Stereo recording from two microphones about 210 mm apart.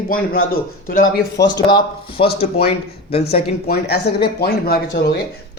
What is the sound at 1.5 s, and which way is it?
Speech, 20° left (ahead or behind).